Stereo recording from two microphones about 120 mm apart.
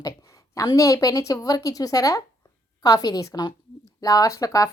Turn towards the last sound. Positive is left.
turn(degrees=25)  # may be behind; listen again after turning